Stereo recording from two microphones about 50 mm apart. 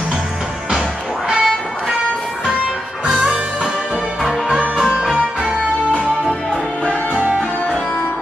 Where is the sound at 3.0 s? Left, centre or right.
Right.